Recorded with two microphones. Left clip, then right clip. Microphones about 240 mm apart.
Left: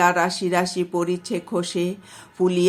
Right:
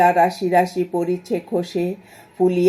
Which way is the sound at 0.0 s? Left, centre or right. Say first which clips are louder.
Right 4 dB; centre.